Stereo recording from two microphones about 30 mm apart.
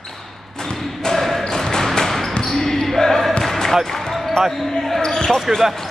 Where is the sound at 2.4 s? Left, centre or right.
Centre.